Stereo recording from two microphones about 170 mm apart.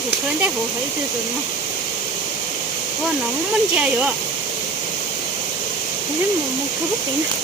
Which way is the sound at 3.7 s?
5° right (ahead or behind).